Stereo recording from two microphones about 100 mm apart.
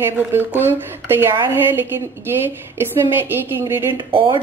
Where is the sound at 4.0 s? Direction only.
50° right (ahead or behind).